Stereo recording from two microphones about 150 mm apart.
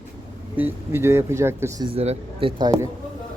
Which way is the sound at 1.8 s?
40° right (ahead or behind).